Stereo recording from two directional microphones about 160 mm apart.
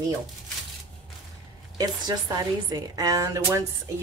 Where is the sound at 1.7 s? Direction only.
25° right (ahead or behind).